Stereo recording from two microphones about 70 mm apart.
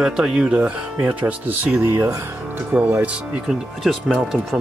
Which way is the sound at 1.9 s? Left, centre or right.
Right.